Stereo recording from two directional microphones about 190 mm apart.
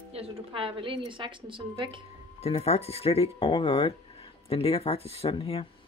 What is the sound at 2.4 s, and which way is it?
Speech, 35° left (ahead or behind).